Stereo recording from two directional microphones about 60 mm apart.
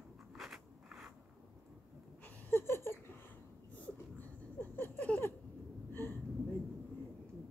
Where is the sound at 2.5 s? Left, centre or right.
Left.